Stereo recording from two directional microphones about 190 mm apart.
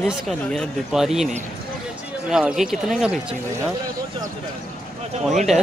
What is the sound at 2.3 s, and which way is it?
Speech, 5° right (ahead or behind).